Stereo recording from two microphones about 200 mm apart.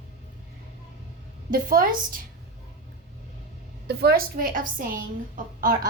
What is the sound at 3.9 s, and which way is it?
A woman's voice, 55° right (ahead or behind).